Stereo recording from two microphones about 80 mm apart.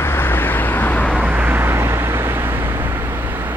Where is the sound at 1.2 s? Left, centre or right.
Right.